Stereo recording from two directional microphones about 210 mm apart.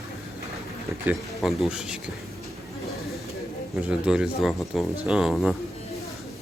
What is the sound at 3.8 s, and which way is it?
Speech, 5° right (ahead or behind).